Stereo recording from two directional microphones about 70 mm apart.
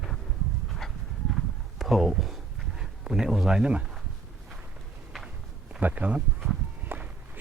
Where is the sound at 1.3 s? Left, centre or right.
Centre.